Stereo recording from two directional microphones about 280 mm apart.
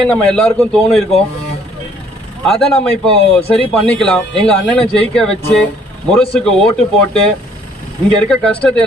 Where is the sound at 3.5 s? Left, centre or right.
Centre.